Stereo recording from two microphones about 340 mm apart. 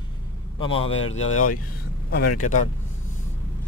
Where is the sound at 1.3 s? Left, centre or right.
Left.